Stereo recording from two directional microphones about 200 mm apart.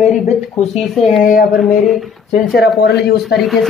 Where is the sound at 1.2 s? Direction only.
45° left (ahead or behind).